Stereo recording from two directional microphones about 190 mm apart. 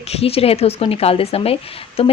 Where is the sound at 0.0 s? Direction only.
30° left (ahead or behind).